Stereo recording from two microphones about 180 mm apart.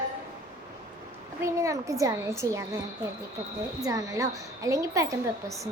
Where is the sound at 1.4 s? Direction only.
15° right (ahead or behind).